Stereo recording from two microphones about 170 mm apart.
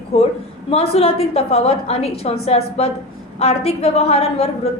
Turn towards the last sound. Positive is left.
turn(degrees=35)  # may be behind; listen again after turning